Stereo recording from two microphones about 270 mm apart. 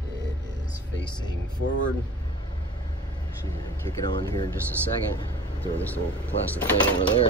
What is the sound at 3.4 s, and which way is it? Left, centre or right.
Speech, centre.